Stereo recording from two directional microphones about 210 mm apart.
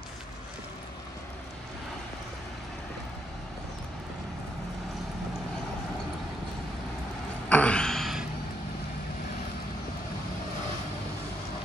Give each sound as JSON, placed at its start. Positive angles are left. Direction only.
{"t": 7.4, "sound": "gasp", "side_deg": 5}